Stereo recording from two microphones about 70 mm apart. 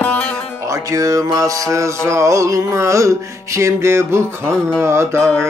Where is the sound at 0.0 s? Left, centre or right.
Centre.